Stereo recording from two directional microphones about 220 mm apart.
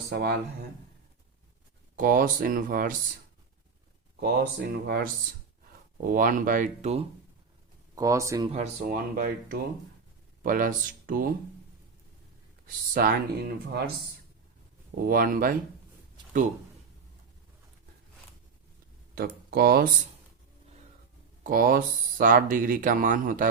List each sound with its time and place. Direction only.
0.1 s speech: 45° right (ahead or behind)
2.0 s speech: 40° right (ahead or behind)
4.2 s speech: 45° right (ahead or behind)
7.9 s speech: 15° right (ahead or behind)
8.5 s speech: 40° right (ahead or behind)
12.9 s speech: 45° right (ahead or behind)
14.9 s speech: 40° right (ahead or behind)
19.1 s speech: 45° right (ahead or behind)
21.4 s speech: 40° right (ahead or behind)